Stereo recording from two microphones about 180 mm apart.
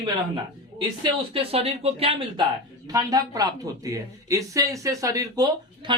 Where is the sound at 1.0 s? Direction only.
30° right (ahead or behind).